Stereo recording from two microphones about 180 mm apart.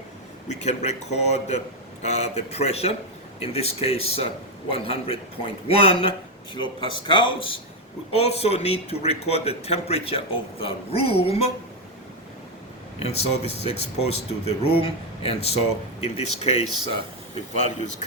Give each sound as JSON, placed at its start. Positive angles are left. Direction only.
{"t": 0.4, "sound": "speech", "side_deg": 40}
{"t": 13.0, "sound": "speech", "side_deg": 35}